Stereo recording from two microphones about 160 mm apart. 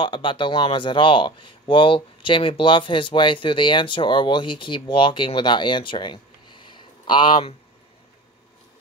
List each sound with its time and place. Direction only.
0.0 s speech: 30° left (ahead or behind)